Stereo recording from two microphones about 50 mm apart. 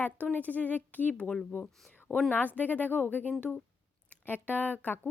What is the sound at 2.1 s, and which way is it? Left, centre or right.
Speech, centre.